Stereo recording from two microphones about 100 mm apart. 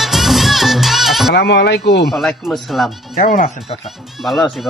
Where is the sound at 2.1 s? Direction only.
5° right (ahead or behind).